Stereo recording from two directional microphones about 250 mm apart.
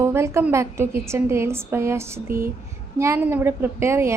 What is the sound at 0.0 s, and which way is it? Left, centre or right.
A woman's voice, centre.